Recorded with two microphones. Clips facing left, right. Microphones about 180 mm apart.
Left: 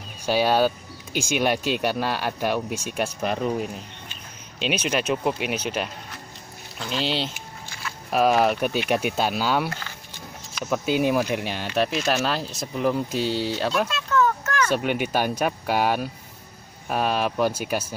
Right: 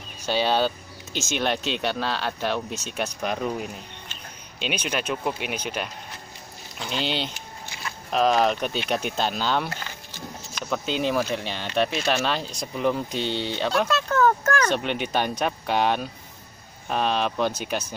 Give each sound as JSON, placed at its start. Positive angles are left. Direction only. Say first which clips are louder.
{"t": 0.2, "sound": "speech", "louder": "left 3 dB", "side_deg": 10}
{"t": 13.8, "sound": "a sound", "louder": "right 2 dB", "side_deg": -50}
{"t": 14.7, "sound": "speech", "louder": "left 2 dB", "side_deg": 5}